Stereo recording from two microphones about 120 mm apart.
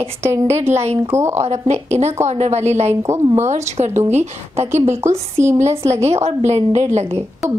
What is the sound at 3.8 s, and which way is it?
Speech, 65° right (ahead or behind).